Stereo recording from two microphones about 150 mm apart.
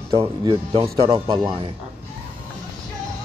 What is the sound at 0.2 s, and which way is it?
A man's voice, 35° right (ahead or behind).